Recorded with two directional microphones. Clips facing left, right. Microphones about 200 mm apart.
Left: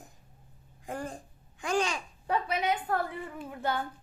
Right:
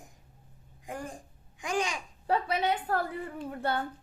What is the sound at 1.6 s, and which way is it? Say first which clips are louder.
Babbling: left 2 dB; 15° right (ahead or behind).